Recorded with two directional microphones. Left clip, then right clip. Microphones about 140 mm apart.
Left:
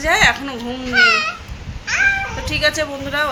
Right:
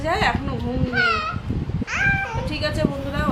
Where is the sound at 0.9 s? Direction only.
45° left (ahead or behind).